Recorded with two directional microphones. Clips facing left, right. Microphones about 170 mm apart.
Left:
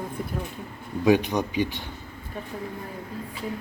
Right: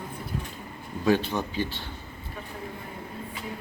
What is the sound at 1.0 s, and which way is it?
Speech, 15° left (ahead or behind).